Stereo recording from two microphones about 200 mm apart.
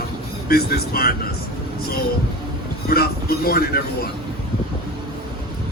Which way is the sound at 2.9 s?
50° left (ahead or behind).